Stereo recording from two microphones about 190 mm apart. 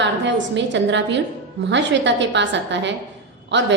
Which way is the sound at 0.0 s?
70° right (ahead or behind).